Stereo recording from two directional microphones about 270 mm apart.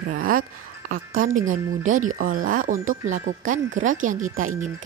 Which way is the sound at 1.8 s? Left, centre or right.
Right.